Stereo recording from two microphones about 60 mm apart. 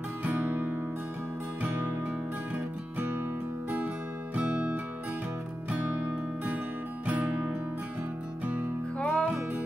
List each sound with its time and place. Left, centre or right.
0.2 s music: right
4.4 s music: right
7.1 s music: right
8.9 s music: left